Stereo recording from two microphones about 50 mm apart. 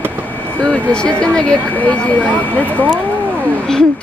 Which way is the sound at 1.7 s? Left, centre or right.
Left.